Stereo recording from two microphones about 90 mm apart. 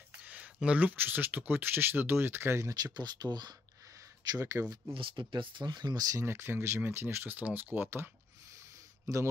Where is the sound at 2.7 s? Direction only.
50° right (ahead or behind).